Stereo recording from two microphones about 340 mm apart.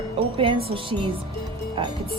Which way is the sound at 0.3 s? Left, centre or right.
Centre.